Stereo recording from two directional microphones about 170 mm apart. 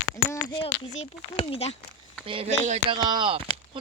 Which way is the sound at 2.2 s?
30° right (ahead or behind).